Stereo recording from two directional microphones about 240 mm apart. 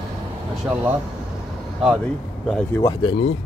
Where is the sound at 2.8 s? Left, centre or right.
Centre.